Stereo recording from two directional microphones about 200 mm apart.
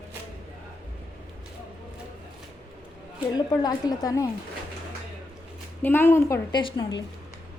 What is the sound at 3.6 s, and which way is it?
Speech, 20° left (ahead or behind).